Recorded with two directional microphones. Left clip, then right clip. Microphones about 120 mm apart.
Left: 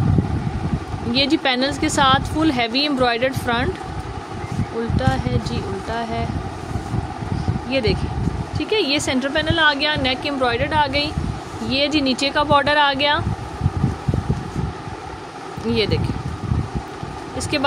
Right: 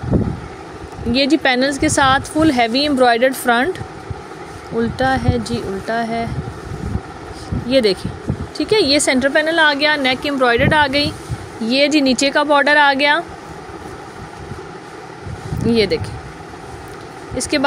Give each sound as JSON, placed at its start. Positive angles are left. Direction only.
{"t": 1.1, "sound": "a woman's voice", "side_deg": -30}
{"t": 4.9, "sound": "a woman's voice", "side_deg": -50}
{"t": 7.7, "sound": "speech", "side_deg": -45}
{"t": 8.5, "sound": "a woman's voice", "side_deg": -55}
{"t": 11.6, "sound": "a woman's voice", "side_deg": -45}
{"t": 15.7, "sound": "a woman's voice", "side_deg": -40}
{"t": 17.4, "sound": "a woman's voice", "side_deg": -40}